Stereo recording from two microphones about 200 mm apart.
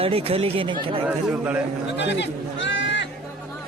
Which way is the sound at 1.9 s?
60° left (ahead or behind).